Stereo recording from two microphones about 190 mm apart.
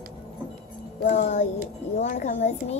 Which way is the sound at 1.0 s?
40° left (ahead or behind).